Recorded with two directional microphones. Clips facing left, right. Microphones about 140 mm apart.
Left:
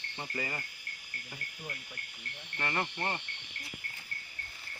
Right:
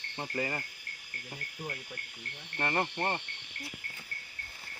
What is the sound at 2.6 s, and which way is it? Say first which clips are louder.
Insect: right 3 dB; 40° right (ahead or behind).